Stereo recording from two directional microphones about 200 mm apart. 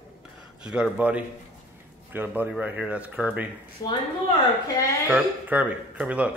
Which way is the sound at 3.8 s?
20° left (ahead or behind).